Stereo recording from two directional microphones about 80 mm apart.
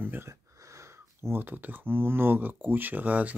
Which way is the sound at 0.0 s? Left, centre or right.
Right.